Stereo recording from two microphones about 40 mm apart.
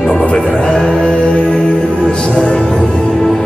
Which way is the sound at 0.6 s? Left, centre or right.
Centre.